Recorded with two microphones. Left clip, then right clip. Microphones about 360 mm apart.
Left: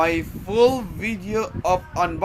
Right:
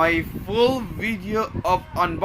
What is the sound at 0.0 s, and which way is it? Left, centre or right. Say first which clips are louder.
Speech: right 1 dB; centre.